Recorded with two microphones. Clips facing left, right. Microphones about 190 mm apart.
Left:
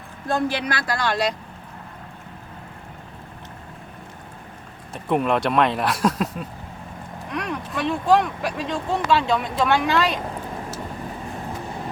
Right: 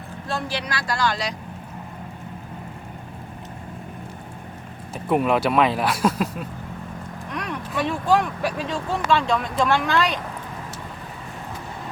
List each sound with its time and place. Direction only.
0.3 s speech: 55° left (ahead or behind)
4.9 s speech: 5° right (ahead or behind)